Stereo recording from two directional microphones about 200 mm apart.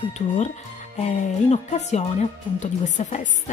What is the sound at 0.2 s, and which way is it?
A woman's voice, 35° left (ahead or behind).